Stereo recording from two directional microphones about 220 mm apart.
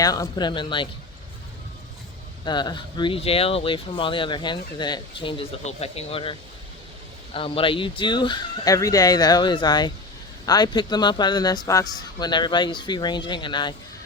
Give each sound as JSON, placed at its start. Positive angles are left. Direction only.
{"t": 0.0, "sound": "speech", "side_deg": 15}
{"t": 2.4, "sound": "speech", "side_deg": 20}
{"t": 7.3, "sound": "speech", "side_deg": 25}